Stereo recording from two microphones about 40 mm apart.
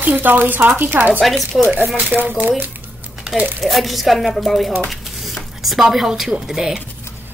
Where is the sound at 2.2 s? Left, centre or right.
Right.